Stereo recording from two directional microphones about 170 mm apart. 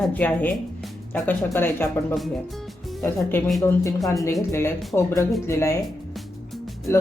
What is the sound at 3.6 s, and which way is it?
Speech, 20° left (ahead or behind).